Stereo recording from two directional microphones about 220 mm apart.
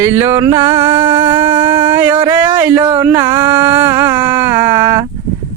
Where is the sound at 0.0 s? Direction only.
10° right (ahead or behind).